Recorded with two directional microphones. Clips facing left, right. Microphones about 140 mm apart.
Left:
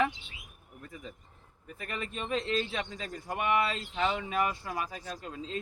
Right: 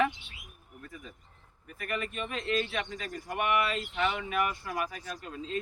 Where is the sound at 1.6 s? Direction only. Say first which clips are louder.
Right 3 dB; 30° left (ahead or behind).